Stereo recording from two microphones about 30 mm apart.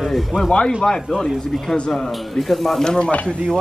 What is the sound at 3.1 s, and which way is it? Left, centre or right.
Speech, left.